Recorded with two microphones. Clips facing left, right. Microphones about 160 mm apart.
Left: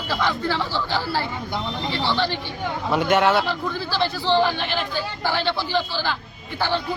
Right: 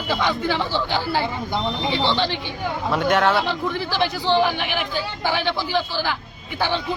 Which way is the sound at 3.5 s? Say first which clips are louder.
Right 2 dB; 20° right (ahead or behind).